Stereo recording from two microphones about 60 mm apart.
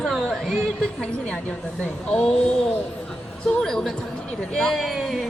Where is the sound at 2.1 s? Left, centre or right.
Centre.